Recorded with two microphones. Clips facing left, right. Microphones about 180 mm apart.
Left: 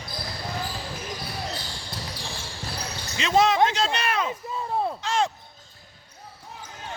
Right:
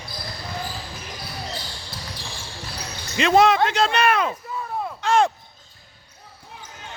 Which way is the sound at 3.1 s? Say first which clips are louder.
Right 5 dB; 60° right (ahead or behind).